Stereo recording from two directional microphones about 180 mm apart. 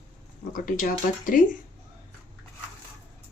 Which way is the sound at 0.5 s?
50° left (ahead or behind).